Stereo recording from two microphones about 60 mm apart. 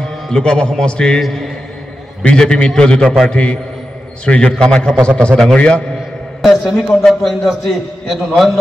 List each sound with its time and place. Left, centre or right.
0.3 s a man's voice: centre
5.6 s a man's voice: centre
6.4 s a man's voice: centre